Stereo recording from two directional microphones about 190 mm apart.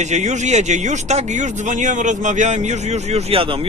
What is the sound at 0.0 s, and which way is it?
Speech, 40° right (ahead or behind).